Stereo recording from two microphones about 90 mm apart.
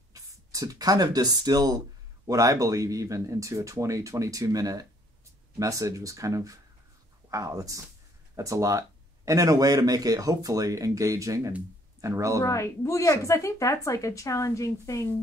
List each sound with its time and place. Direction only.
0.1 s speech: 40° right (ahead or behind)
12.4 s speech: 35° left (ahead or behind)